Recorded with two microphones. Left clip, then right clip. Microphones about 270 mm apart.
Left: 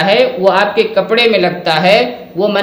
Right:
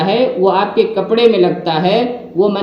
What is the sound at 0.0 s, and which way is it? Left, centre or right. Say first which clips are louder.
A man's voice: left 3 dB; left.